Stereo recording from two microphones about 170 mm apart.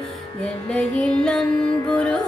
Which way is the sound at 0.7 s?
5° left (ahead or behind).